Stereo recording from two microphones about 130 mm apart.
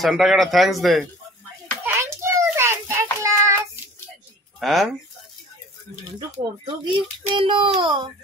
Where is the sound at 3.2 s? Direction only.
20° right (ahead or behind).